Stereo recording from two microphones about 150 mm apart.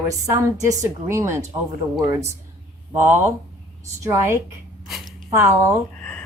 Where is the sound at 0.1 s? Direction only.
20° right (ahead or behind).